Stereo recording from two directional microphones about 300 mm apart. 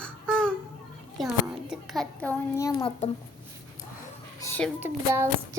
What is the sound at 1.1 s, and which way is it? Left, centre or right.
A child's voice, centre.